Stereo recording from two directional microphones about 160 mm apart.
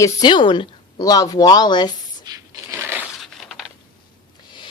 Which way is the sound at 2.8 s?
15° right (ahead or behind).